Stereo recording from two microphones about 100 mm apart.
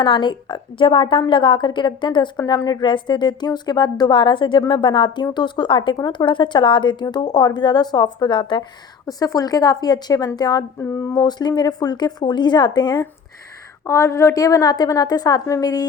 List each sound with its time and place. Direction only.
0.0 s speech: 50° left (ahead or behind)
2.3 s speech: 35° left (ahead or behind); by 8.6 s 50° left (ahead or behind)
9.0 s a woman's voice: 35° left (ahead or behind)
10.8 s speech: 25° left (ahead or behind); by 13.1 s 45° left (ahead or behind)
13.8 s a woman's voice: 30° left (ahead or behind)